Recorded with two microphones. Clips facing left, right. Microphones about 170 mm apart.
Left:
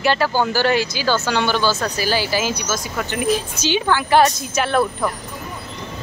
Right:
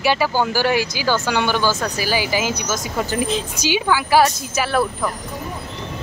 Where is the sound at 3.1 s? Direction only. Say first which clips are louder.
Left 3 dB; 30° right (ahead or behind).